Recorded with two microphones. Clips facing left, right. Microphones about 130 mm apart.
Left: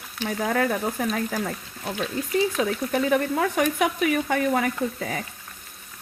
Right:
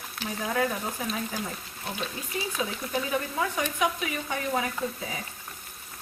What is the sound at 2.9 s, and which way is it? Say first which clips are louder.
Frying: left 8 dB; 60° left (ahead or behind).